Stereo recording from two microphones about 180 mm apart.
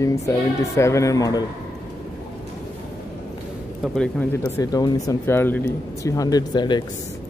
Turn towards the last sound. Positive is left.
turn(degrees=25)  # may be behind; listen again after turning